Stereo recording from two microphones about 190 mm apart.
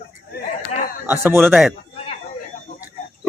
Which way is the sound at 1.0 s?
10° right (ahead or behind).